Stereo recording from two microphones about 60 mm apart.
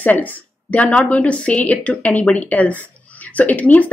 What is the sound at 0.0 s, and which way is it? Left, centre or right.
A woman's voice, left.